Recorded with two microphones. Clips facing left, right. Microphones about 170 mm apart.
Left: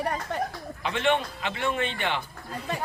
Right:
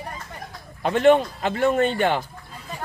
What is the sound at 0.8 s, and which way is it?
A man's voice, 45° right (ahead or behind).